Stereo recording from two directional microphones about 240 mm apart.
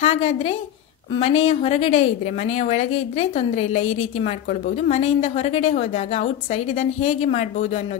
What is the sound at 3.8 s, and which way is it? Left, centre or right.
Speech, left.